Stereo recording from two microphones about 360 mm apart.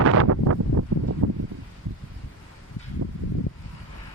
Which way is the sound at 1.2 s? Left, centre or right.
Right.